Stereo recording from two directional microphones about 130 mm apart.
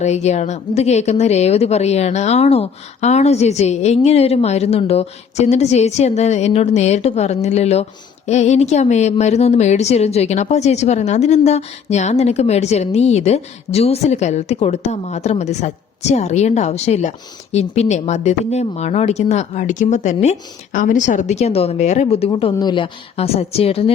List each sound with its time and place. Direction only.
0.0 s speech: 60° left (ahead or behind)
20.7 s a woman's voice: 80° left; by 23.9 s 50° left (ahead or behind)